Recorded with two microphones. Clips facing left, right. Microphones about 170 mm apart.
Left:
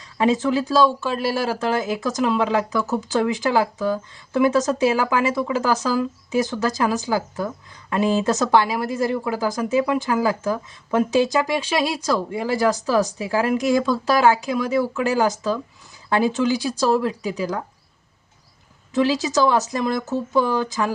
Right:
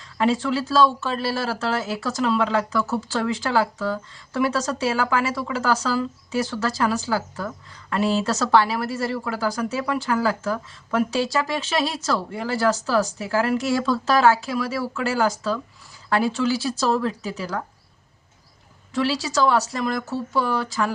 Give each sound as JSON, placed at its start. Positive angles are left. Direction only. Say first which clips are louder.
{"t": 0.0, "sound": "speech", "louder": "left 2 dB", "side_deg": 20}
{"t": 18.9, "sound": "speech", "louder": "left 3 dB", "side_deg": 20}